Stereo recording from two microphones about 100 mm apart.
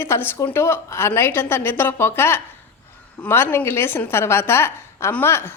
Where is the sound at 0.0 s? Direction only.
25° left (ahead or behind).